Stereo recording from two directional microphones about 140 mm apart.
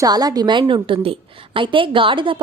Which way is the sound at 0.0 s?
25° right (ahead or behind).